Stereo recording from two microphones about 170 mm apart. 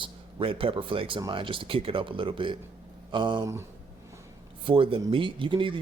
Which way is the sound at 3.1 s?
30° right (ahead or behind).